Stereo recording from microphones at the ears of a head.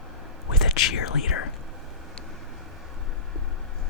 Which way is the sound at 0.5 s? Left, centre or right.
Left.